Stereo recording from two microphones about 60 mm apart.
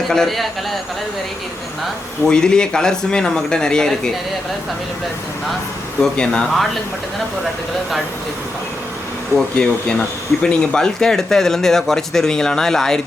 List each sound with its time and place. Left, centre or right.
0.1 s a man's voice: centre
2.2 s speech: centre
6.0 s speech: centre
9.6 s speech: centre